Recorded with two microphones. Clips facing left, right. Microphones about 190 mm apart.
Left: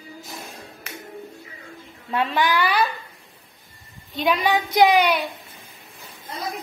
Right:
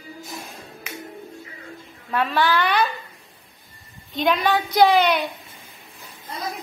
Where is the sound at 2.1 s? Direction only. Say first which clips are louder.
Right 1 dB; 20° left (ahead or behind).